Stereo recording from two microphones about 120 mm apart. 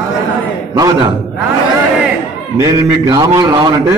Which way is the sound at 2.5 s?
25° right (ahead or behind).